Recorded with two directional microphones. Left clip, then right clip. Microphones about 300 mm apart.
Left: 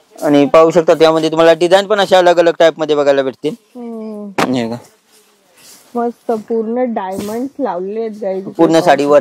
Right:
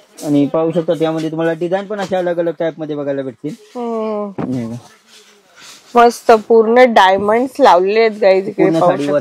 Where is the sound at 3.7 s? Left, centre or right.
Centre.